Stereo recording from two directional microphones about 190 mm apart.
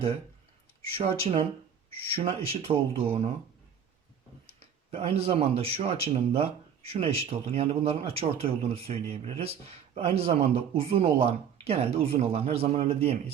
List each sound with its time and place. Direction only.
0.9 s speech: 30° right (ahead or behind)
4.9 s speech: 30° right (ahead or behind)